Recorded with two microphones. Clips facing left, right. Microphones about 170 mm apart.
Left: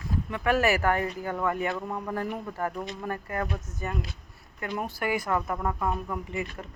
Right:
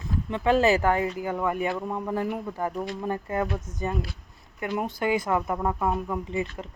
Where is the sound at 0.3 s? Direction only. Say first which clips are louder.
Right 4 dB; 25° right (ahead or behind).